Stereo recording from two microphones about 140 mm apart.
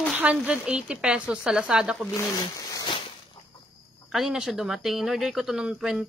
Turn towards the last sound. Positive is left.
turn(degrees=-5)  # may be behind; listen again after turning